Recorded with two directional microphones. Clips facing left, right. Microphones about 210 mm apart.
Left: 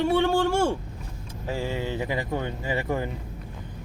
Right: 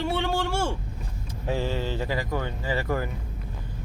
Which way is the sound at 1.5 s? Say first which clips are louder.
Even; 15° left (ahead or behind).